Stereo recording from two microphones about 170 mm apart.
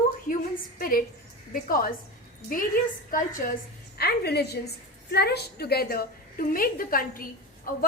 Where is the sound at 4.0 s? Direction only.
70° left (ahead or behind).